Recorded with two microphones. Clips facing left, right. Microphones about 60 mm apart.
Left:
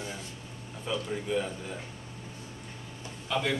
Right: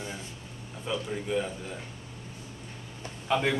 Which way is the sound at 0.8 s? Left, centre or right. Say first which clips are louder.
Even; centre.